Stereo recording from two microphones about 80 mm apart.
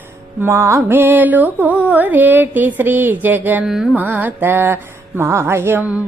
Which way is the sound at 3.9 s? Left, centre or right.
Right.